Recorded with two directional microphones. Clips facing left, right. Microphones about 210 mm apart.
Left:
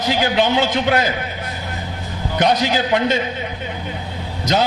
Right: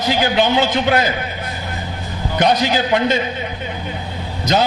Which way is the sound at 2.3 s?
15° right (ahead or behind).